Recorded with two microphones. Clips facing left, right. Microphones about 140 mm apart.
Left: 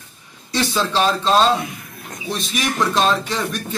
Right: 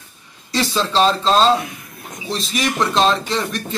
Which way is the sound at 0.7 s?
25° right (ahead or behind).